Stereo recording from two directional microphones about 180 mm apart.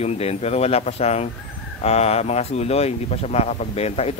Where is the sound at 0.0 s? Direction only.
35° left (ahead or behind).